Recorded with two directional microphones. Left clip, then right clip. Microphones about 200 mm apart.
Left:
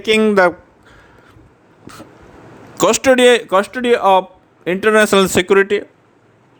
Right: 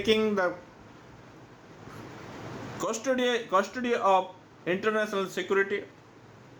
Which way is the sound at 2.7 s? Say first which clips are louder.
Left 17 dB; 60° left (ahead or behind).